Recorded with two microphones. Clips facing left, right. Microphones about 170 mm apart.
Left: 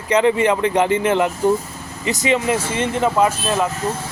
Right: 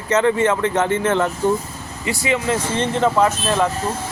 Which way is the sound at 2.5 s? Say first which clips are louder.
Even; 10° left (ahead or behind).